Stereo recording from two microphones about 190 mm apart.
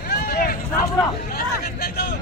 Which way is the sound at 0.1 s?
55° left (ahead or behind).